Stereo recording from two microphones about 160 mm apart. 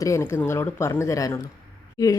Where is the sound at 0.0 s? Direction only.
15° left (ahead or behind).